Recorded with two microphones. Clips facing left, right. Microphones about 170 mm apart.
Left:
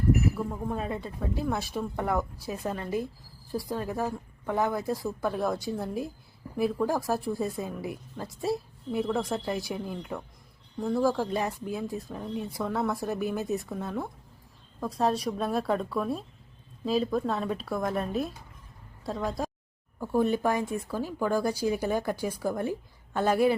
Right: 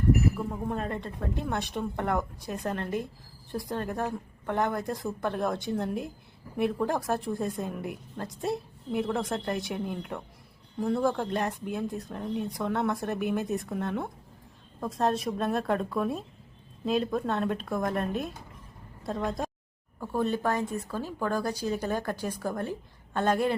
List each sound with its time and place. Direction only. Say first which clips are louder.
0.3 s a woman's voice: even; 5° right (ahead or behind)
20.0 s speech: left 3 dB; 10° left (ahead or behind)